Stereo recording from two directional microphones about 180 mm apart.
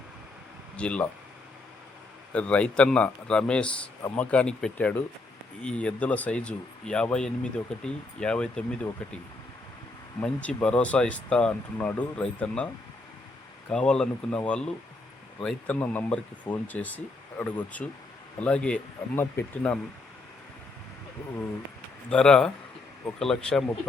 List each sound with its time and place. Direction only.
0.8 s speech: 5° left (ahead or behind)
2.3 s a man's voice: 5° left (ahead or behind)
10.2 s a man's voice: 5° left (ahead or behind)
13.7 s a man's voice: 5° left (ahead or behind)
22.1 s speech: 5° left (ahead or behind)